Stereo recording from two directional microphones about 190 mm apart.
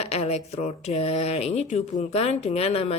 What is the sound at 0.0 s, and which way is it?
Speech, 35° left (ahead or behind).